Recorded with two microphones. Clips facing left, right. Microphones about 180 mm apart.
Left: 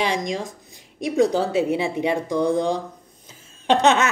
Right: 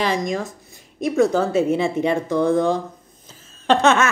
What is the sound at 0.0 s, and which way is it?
A woman's voice, 15° left (ahead or behind).